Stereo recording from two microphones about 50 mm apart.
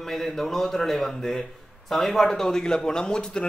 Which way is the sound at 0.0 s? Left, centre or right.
Centre.